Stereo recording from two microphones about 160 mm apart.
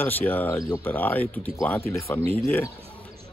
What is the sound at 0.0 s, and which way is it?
Speech, 10° left (ahead or behind).